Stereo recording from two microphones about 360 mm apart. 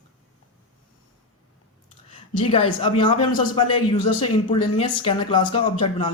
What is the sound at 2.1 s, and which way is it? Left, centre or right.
A man's voice, centre.